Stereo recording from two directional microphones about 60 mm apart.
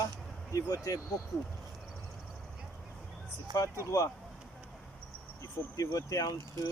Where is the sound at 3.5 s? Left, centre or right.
Left.